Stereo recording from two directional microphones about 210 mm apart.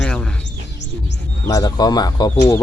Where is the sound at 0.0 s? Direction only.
5° left (ahead or behind).